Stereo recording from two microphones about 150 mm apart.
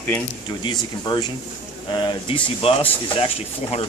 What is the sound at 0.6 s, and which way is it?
Speech, 30° left (ahead or behind).